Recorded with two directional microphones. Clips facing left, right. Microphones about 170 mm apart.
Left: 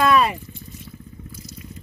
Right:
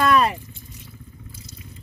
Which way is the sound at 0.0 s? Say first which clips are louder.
Left 1 dB; 5° left (ahead or behind).